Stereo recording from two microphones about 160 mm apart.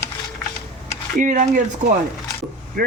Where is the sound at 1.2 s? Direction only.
55° right (ahead or behind).